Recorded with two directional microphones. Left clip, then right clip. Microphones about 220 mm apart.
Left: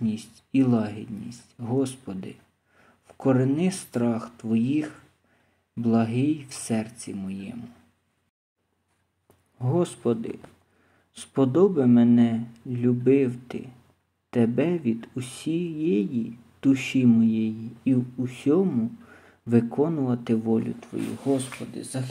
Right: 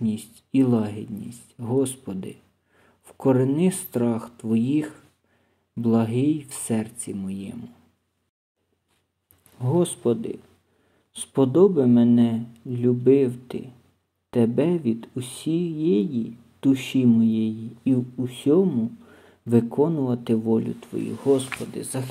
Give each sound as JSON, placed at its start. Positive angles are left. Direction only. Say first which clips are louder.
{"t": 0.1, "sound": "speech", "louder": "right 2 dB", "side_deg": -65}
{"t": 0.5, "sound": "speech", "louder": "right 2 dB", "side_deg": -20}
{"t": 5.8, "sound": "speech", "louder": "right 2 dB", "side_deg": -25}
{"t": 9.6, "sound": "speech", "louder": "right 3 dB", "side_deg": -15}